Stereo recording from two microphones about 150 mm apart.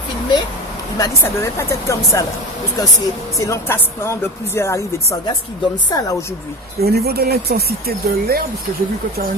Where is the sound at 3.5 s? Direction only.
15° left (ahead or behind).